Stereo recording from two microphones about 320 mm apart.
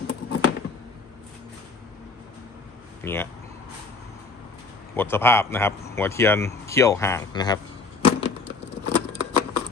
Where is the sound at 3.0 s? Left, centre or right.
Centre.